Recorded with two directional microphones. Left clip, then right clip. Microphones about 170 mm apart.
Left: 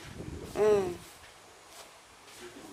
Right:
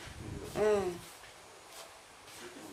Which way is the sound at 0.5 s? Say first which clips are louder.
Left 4 dB; 35° left (ahead or behind).